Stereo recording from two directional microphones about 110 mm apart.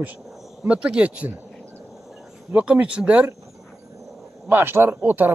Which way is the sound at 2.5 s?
10° right (ahead or behind).